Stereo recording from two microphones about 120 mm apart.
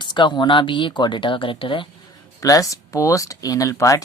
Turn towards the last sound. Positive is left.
turn(degrees=30)  # may be behind; listen again after turning